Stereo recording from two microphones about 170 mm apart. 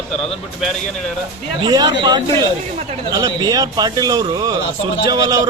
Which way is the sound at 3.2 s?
20° right (ahead or behind).